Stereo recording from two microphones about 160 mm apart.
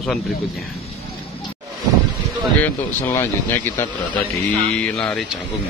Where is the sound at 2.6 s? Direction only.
15° left (ahead or behind).